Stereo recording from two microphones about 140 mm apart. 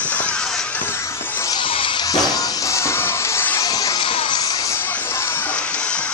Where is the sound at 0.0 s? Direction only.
10° left (ahead or behind).